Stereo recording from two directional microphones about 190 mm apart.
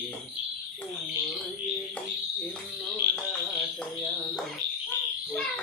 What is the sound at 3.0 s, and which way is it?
Frog, 55° right (ahead or behind).